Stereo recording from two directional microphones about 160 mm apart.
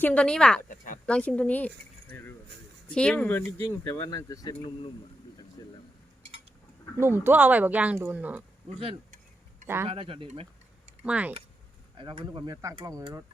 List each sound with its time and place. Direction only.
0.0 s speech: 10° left (ahead or behind); by 4.9 s 25° left (ahead or behind)
5.6 s a sound: 20° left (ahead or behind)
7.0 s speech: 15° right (ahead or behind)
9.8 s speech: 35° right (ahead or behind)
11.0 s speech: 10° right (ahead or behind)
11.9 s speech: 30° right (ahead or behind)